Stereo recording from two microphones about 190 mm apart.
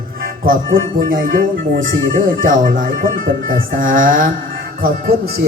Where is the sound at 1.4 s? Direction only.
90° right.